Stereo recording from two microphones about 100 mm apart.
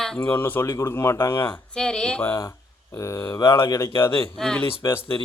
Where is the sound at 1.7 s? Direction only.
10° left (ahead or behind).